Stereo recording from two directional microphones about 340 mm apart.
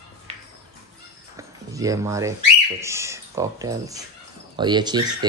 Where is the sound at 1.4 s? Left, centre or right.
Centre.